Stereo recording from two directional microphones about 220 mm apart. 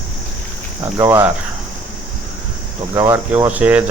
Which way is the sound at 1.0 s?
10° right (ahead or behind).